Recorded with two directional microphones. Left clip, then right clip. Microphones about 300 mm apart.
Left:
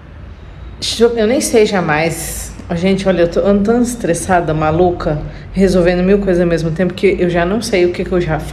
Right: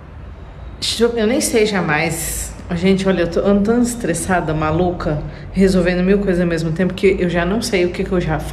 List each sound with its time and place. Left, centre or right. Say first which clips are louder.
0.7 s a woman's voice: left 4 dB; centre